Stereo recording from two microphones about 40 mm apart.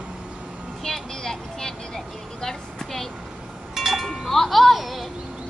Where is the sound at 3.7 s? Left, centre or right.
Centre.